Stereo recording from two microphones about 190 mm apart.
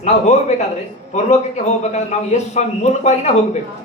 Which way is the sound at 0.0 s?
35° left (ahead or behind).